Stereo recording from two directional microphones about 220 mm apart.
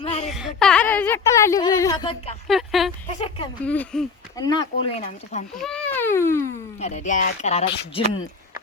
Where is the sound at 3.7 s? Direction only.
5° left (ahead or behind).